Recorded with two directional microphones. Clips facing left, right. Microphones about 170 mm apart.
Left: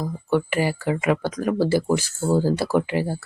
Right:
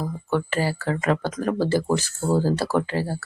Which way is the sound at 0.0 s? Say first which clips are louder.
Left 2 dB; 15° left (ahead or behind).